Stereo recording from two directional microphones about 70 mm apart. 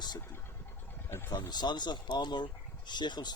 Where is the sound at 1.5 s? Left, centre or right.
Left.